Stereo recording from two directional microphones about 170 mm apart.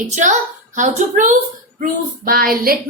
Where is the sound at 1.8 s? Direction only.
55° right (ahead or behind).